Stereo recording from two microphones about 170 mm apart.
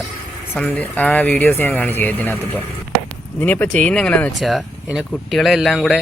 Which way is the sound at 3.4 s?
10° left (ahead or behind).